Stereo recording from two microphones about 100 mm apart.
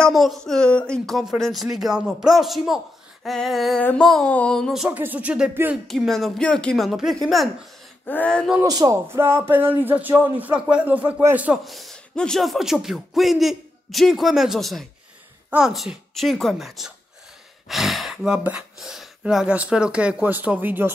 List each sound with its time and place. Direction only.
0.1 s speech: centre (ahead or behind)
4.8 s speech: 15° right (ahead or behind)
5.9 s speech: 5° left (ahead or behind)
8.1 s speech: 15° left (ahead or behind)
8.6 s speech: 40° right (ahead or behind)
9.1 s speech: 25° right (ahead or behind)
11.6 s speech: centre (ahead or behind); by 20.9 s 20° right (ahead or behind)